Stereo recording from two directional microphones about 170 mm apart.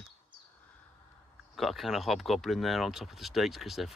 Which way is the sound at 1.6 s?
Centre (ahead or behind).